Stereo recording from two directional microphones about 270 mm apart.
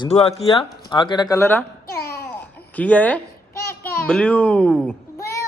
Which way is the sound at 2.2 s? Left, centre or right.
Centre.